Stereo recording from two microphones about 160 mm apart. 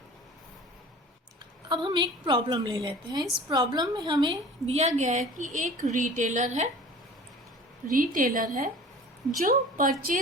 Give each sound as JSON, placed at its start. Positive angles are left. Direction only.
{"t": 1.7, "sound": "a woman's voice", "side_deg": -30}
{"t": 7.9, "sound": "a woman's voice", "side_deg": -60}